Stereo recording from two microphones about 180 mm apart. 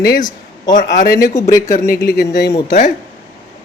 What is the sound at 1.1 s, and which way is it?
Speech, 20° left (ahead or behind).